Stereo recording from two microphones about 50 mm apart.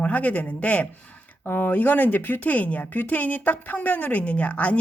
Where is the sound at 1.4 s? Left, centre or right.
Left.